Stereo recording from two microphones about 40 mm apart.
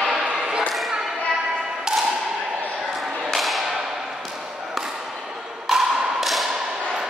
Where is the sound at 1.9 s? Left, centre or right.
Centre.